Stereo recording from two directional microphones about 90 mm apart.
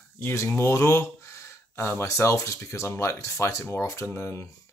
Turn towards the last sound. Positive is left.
turn(degrees=30)  # may be behind; listen again after turning